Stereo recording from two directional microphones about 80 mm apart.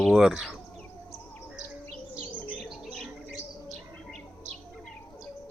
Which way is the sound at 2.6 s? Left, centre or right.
Centre.